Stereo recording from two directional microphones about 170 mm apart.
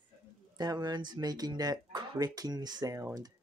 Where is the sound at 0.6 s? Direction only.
25° right (ahead or behind).